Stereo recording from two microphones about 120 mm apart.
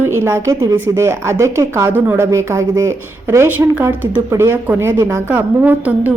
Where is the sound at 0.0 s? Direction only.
20° right (ahead or behind).